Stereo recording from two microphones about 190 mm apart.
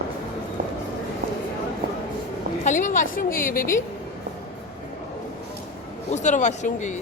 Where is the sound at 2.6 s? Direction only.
40° left (ahead or behind).